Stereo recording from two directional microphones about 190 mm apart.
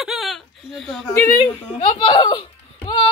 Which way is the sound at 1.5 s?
25° left (ahead or behind).